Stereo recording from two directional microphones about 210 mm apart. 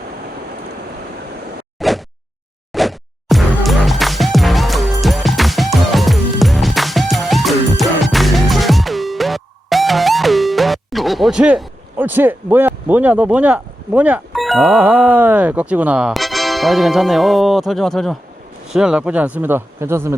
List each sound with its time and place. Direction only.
1.8 s a sound: centre (ahead or behind)
2.7 s music: centre (ahead or behind)
18.7 s speech: 5° right (ahead or behind)